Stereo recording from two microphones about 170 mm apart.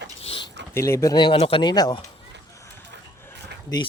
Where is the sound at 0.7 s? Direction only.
15° left (ahead or behind).